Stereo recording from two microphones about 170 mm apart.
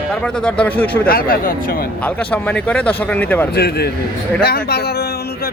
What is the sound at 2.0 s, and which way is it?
Speech, 10° left (ahead or behind).